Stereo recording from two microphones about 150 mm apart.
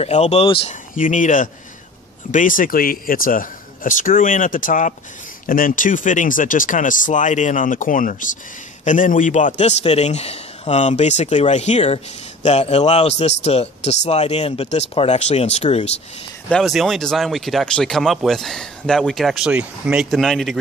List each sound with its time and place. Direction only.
0.0 s a man's voice: 45° left (ahead or behind)
0.9 s a man's voice: 60° left (ahead or behind)
16.4 s speech: centre (ahead or behind)